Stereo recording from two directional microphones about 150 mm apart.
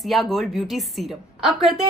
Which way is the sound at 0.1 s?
Centre (ahead or behind).